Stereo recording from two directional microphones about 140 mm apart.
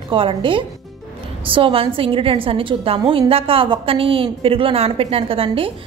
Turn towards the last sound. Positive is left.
turn(degrees=-40)  # may be behind; listen again after turning